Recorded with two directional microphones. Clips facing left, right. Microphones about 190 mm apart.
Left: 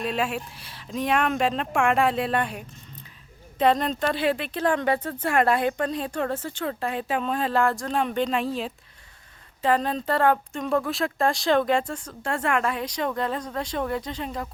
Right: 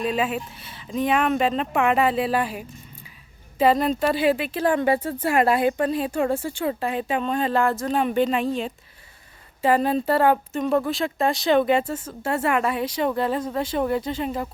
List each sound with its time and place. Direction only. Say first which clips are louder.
0.0 s speech: right 3 dB; centre (ahead or behind)